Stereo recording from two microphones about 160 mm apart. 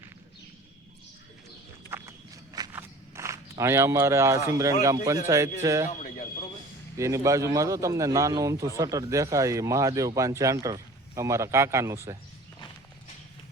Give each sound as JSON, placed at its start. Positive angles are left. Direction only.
{"t": 1.9, "sound": "walk", "side_deg": -20}
{"t": 4.8, "sound": "a man's voice", "side_deg": -20}
{"t": 5.9, "sound": "a sound", "side_deg": 50}
{"t": 6.9, "sound": "a man's voice", "side_deg": -20}